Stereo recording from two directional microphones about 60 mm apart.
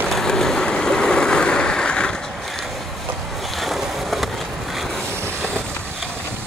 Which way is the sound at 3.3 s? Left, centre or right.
Centre.